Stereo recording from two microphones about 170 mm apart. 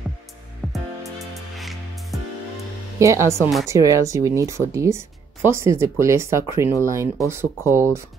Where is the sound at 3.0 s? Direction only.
15° right (ahead or behind).